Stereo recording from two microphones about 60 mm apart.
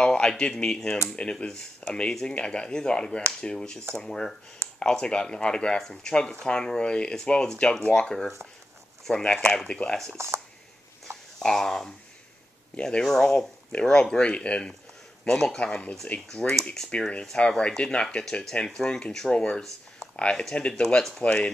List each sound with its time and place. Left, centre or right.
0.0 s speech: centre
10.1 s speech: right
11.3 s speech: centre
12.7 s speech: centre